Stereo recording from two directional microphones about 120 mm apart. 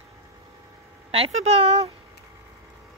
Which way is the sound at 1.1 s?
60° right (ahead or behind).